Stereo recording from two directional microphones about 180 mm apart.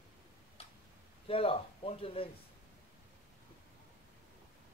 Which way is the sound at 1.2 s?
30° left (ahead or behind).